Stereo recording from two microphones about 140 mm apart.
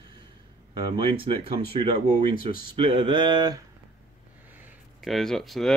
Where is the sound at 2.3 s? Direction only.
90° left.